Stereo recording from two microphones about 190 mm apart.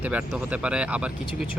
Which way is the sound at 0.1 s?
5° right (ahead or behind).